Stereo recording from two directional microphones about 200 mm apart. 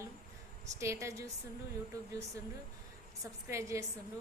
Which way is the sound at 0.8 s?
15° right (ahead or behind).